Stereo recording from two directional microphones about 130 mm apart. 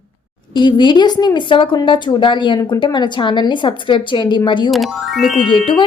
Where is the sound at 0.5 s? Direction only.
35° left (ahead or behind).